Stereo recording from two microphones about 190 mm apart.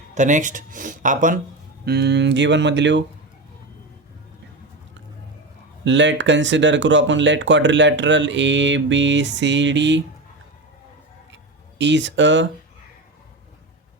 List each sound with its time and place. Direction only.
0.1 s speech: 40° right (ahead or behind)
1.8 s speech: 60° right (ahead or behind)
5.8 s speech: 70° right (ahead or behind)
11.8 s speech: 70° right (ahead or behind)